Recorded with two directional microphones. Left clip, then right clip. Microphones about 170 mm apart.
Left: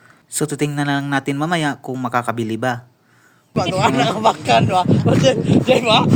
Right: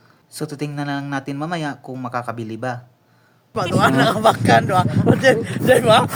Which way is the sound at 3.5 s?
20° right (ahead or behind).